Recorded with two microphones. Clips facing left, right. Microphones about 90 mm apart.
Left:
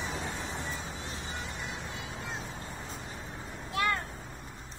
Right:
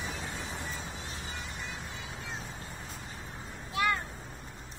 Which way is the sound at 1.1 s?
30° left (ahead or behind).